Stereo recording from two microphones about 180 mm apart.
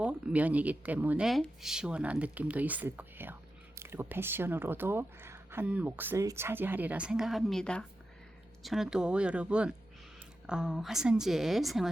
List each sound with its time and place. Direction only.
0.0 s a woman's voice: 5° right (ahead or behind)